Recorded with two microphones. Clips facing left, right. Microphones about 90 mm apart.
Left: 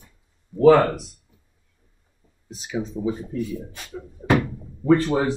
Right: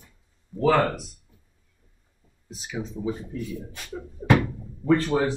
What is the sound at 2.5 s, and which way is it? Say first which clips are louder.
Speech: left 5 dB; centre (ahead or behind).